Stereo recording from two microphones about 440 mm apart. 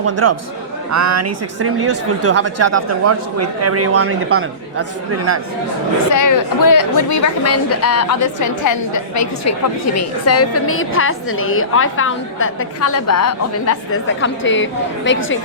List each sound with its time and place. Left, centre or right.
0.0 s speech: right
6.1 s a woman's voice: left